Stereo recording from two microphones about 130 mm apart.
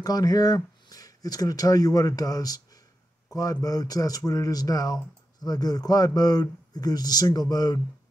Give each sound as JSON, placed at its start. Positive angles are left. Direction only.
{"t": 0.0, "sound": "speech", "side_deg": 30}